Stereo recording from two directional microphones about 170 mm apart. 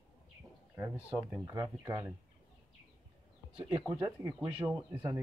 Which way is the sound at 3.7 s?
15° right (ahead or behind).